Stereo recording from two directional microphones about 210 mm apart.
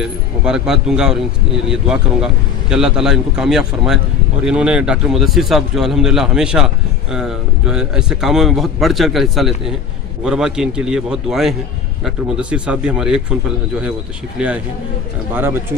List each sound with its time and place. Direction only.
0.0 s a man's voice: 5° right (ahead or behind)